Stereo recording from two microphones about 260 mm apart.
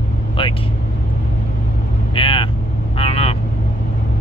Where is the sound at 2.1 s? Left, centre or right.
Centre.